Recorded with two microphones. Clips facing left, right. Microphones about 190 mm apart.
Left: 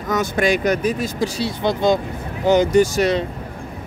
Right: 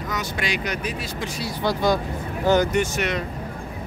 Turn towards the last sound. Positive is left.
turn(degrees=35)  # may be behind; listen again after turning